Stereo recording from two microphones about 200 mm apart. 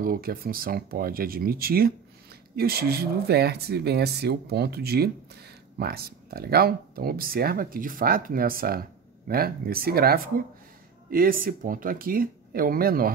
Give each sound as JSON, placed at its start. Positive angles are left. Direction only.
{"t": 0.0, "sound": "speech", "side_deg": -45}